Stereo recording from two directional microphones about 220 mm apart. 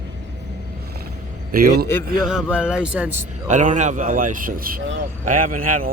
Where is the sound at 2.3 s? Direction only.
5° right (ahead or behind).